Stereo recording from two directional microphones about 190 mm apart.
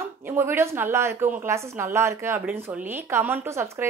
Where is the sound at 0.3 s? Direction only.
10° right (ahead or behind).